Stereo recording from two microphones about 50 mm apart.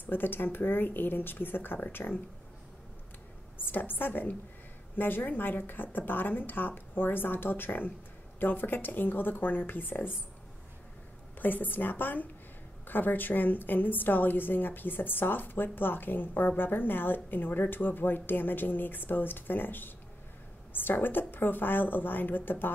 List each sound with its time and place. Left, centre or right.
0.0 s a woman's voice: left
3.5 s a woman's voice: left
11.3 s a woman's voice: left